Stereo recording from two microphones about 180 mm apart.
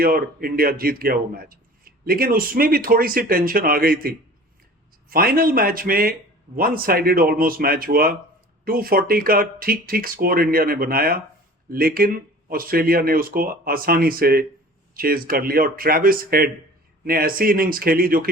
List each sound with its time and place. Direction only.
0.0 s speech: 55° right (ahead or behind)